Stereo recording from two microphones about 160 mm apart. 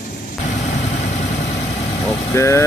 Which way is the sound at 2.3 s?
20° left (ahead or behind).